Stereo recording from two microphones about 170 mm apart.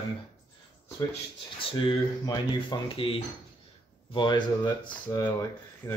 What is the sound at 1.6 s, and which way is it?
Speech, 25° left (ahead or behind).